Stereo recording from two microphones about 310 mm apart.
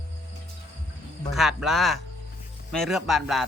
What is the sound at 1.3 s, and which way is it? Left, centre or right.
Speech, centre.